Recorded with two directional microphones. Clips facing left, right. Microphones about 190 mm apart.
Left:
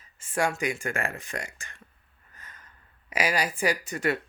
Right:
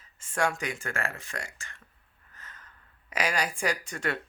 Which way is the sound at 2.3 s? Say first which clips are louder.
Even; 15° left (ahead or behind).